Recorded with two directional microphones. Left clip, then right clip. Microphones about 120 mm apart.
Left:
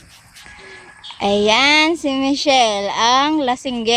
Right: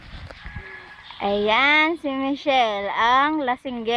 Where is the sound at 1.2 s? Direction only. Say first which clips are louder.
Left 5 dB; 35° left (ahead or behind).